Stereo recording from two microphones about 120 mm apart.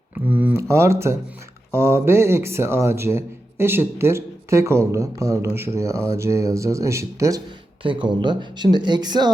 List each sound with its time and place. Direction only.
0.1 s a man's voice: 15° right (ahead or behind)
7.8 s speech: 45° right (ahead or behind)